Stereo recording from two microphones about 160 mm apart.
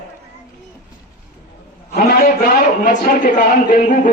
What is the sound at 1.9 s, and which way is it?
A man's voice, 60° left (ahead or behind).